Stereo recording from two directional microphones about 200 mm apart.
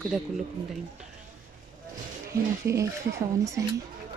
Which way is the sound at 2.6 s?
15° right (ahead or behind).